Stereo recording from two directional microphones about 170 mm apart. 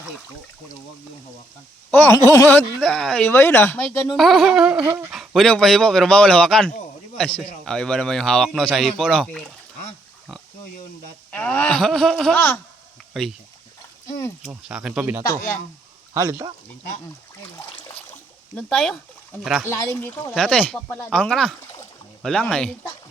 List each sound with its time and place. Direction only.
1.9 s speech: 15° left (ahead or behind)
4.1 s speech: centre (ahead or behind)
11.3 s speech: 10° left (ahead or behind)
14.7 s speech: 5° right (ahead or behind)
16.1 s speech: 20° right (ahead or behind)
18.5 s speech: 5° left (ahead or behind)
21.1 s speech: 5° left (ahead or behind)